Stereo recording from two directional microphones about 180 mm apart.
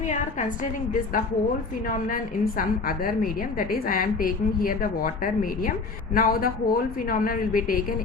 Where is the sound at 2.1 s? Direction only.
50° left (ahead or behind).